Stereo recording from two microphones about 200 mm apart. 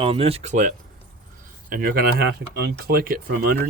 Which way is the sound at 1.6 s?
45° right (ahead or behind).